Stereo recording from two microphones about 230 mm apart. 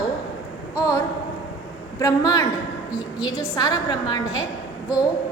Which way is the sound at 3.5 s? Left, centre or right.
Centre.